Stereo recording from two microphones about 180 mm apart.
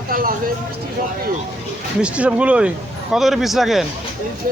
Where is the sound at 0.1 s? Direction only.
50° right (ahead or behind).